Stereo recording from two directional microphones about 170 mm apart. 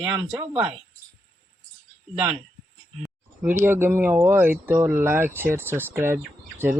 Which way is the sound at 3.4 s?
15° right (ahead or behind).